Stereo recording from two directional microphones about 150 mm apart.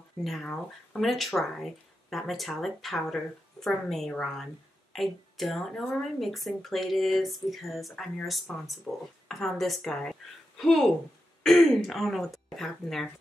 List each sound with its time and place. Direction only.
0.2 s speech: centre (ahead or behind)